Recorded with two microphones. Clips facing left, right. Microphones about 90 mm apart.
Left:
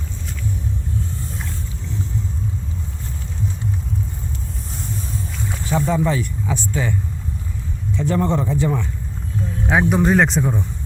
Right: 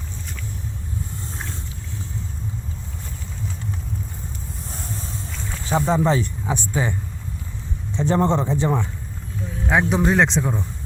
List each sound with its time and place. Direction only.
5.6 s speech: 25° right (ahead or behind)
7.9 s speech: 25° right (ahead or behind)
9.6 s speech: 5° left (ahead or behind)